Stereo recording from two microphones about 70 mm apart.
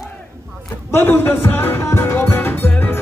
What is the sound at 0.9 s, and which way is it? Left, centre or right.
Music, left.